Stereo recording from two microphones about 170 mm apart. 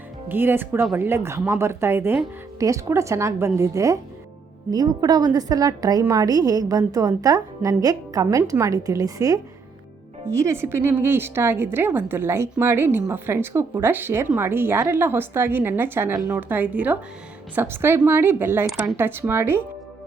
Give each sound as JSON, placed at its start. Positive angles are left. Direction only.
{"t": 0.3, "sound": "a woman's voice", "side_deg": -10}